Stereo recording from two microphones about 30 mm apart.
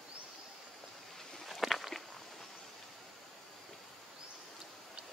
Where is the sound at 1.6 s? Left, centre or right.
Centre.